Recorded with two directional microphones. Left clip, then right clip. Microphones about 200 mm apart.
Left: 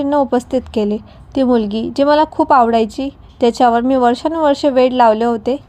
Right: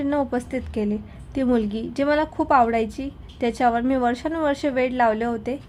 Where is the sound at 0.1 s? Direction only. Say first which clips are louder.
Left 12 dB; 20° left (ahead or behind).